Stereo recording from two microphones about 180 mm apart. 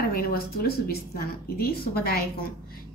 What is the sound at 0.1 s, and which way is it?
A woman's voice, 55° left (ahead or behind).